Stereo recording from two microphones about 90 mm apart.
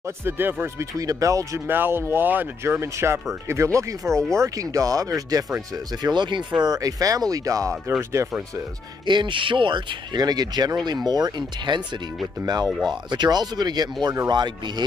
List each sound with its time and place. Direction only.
0.0 s speech: 25° right (ahead or behind)
0.9 s speech: 40° right (ahead or behind)
1.7 s speech: 25° right (ahead or behind); by 6.4 s 60° right (ahead or behind)
6.6 s speech: 45° right (ahead or behind)
9.0 s speech: 60° right (ahead or behind)
12.6 s speech: centre (ahead or behind)
12.9 s speech: 55° right (ahead or behind)